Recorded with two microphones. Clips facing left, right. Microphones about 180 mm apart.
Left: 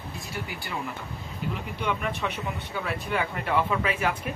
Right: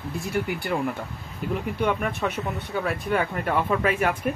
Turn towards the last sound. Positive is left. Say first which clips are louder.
# right 4 dB
turn(degrees=-50)  # may be behind; listen again after turning